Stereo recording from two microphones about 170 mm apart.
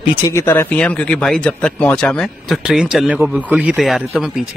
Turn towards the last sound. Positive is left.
turn(degrees=-5)  # may be behind; listen again after turning